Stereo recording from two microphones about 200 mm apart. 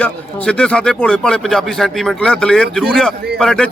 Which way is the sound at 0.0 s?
5° left (ahead or behind).